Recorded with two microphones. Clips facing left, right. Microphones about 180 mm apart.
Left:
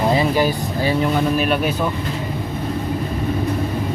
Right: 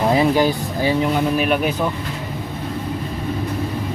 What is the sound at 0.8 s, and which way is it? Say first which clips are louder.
Speech: even; 15° right (ahead or behind).